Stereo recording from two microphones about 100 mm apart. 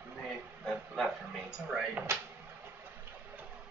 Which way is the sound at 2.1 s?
25° right (ahead or behind).